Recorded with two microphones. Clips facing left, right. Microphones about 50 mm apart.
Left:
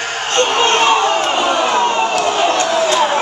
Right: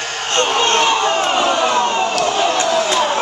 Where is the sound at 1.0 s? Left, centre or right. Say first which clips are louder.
Left 1 dB; centre.